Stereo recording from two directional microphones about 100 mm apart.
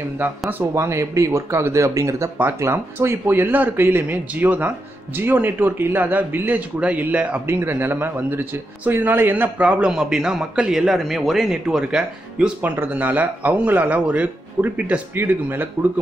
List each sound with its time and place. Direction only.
0.7 s speech: 30° right (ahead or behind)